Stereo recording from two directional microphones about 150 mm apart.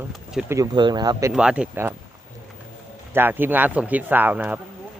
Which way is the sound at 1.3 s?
5° right (ahead or behind).